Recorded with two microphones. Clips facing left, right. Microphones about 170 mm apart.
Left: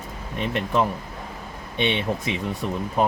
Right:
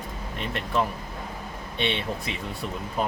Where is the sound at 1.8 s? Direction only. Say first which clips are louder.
Left 4 dB; 20° left (ahead or behind).